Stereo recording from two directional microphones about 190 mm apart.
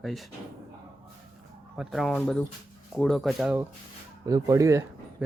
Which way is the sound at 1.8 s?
Centre (ahead or behind).